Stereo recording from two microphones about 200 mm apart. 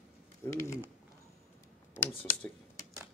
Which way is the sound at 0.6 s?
10° left (ahead or behind).